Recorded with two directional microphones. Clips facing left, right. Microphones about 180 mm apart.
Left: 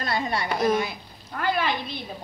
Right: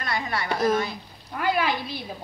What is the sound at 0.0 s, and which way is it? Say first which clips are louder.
Speech: left 2 dB; 25° left (ahead or behind).